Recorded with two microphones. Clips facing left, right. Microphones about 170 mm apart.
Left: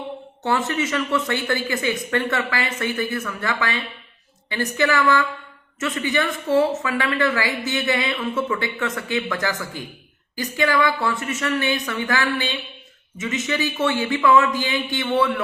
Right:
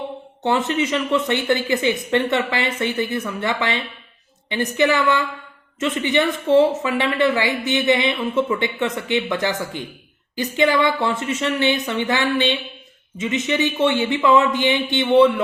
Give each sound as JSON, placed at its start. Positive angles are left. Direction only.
{"t": 0.4, "sound": "speech", "side_deg": -20}